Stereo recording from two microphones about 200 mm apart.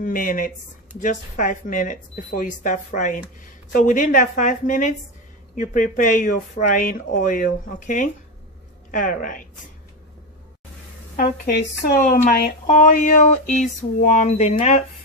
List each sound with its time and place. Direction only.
0.0 s a woman's voice: 45° left (ahead or behind)
11.9 s speech: 45° left (ahead or behind)